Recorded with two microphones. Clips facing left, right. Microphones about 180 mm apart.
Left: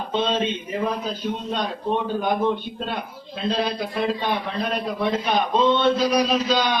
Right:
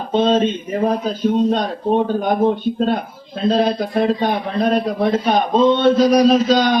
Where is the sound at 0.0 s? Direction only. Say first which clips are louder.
Right 8 dB; 45° right (ahead or behind).